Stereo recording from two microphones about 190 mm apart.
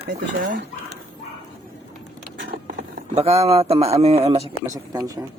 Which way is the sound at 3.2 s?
30° right (ahead or behind).